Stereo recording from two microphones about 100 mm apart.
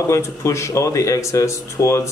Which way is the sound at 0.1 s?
30° left (ahead or behind).